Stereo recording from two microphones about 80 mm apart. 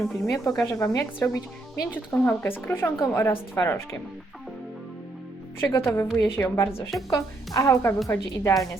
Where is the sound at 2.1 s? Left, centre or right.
Left.